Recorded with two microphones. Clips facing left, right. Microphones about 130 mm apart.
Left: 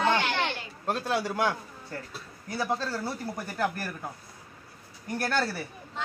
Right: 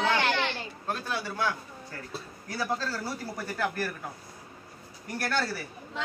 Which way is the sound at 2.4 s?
20° left (ahead or behind).